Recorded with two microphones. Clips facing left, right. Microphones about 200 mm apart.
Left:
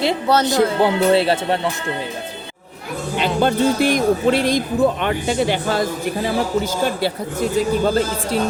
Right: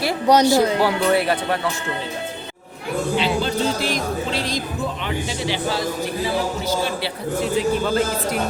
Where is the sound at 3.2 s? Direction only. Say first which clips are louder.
Left 7 dB; 55° left (ahead or behind).